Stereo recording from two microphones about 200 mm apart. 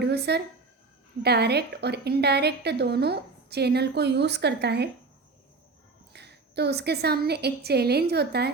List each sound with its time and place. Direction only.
0.0 s a woman's voice: 55° right (ahead or behind)
6.1 s a woman's voice: 55° right (ahead or behind)